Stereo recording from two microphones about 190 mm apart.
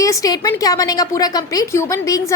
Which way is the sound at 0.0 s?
15° left (ahead or behind).